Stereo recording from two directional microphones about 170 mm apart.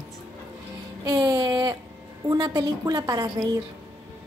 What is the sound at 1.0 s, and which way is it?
A woman's voice, 20° right (ahead or behind).